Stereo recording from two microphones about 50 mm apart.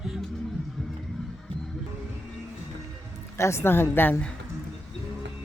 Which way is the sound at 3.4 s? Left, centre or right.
Left.